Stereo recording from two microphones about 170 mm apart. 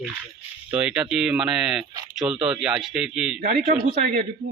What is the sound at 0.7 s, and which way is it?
Speech, 5° right (ahead or behind).